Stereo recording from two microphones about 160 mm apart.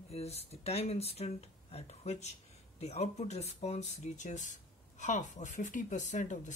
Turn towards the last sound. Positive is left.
turn(degrees=50)  # may be behind; listen again after turning